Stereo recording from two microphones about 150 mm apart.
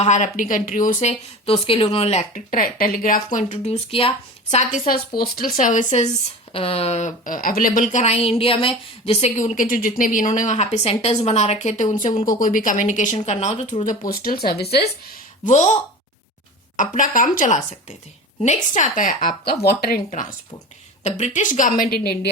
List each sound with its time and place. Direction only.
0.0 s a woman's voice: 50° left (ahead or behind)
2.3 s a woman's voice: 70° left (ahead or behind)
3.3 s a woman's voice: 55° left (ahead or behind)
4.5 s speech: 65° left (ahead or behind)
6.5 s a woman's voice: 40° left (ahead or behind); by 12.1 s 60° left (ahead or behind)
12.1 s speech: 25° left (ahead or behind)
12.4 s speech: 65° left (ahead or behind)
14.1 s speech: 85° left
15.4 s a woman's voice: 50° left (ahead or behind)
19.5 s speech: 90° left
21.0 s a woman's voice: 50° left (ahead or behind); by 22.3 s 90° left